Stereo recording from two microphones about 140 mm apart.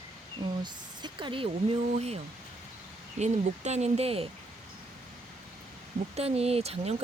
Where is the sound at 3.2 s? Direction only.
50° right (ahead or behind).